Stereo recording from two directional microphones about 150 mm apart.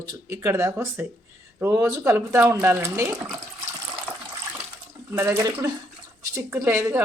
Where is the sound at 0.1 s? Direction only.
20° right (ahead or behind).